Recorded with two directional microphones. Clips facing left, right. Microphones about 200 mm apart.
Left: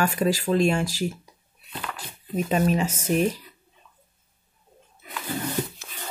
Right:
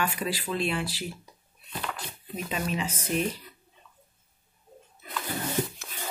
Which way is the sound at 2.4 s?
45° left (ahead or behind).